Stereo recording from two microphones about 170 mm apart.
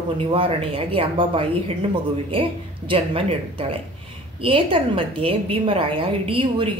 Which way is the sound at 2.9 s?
30° right (ahead or behind).